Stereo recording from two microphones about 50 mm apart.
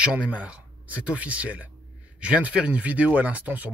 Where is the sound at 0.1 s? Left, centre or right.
Right.